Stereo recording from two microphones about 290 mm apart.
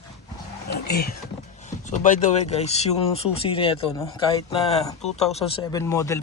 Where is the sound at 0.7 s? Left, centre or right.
Left.